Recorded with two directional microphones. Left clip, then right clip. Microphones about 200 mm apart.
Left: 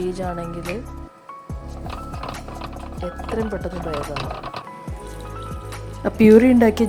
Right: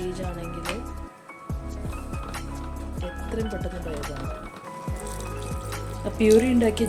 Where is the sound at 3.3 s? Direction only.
20° left (ahead or behind).